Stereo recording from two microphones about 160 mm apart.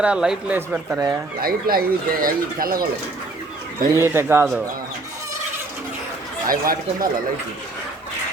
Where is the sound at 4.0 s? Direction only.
15° right (ahead or behind).